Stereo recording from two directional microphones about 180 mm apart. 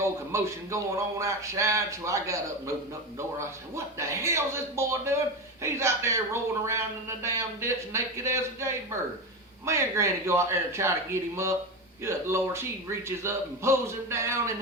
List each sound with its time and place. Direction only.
0.0 s a man's voice: 15° right (ahead or behind)
3.8 s a man's voice: 15° right (ahead or behind)